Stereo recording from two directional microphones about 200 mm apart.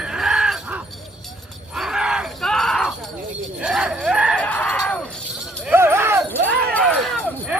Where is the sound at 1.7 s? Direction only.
5° right (ahead or behind).